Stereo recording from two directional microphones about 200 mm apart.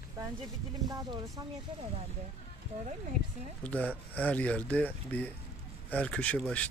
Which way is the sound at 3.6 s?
5° left (ahead or behind).